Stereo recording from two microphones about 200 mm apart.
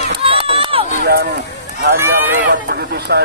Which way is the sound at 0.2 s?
25° right (ahead or behind).